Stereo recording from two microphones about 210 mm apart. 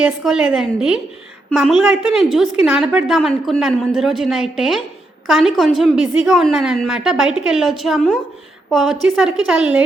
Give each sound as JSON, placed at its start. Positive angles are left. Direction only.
{"t": 0.0, "sound": "a woman's voice", "side_deg": -5}